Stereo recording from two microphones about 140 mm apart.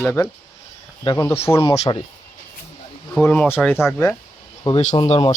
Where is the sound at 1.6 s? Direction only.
50° left (ahead or behind).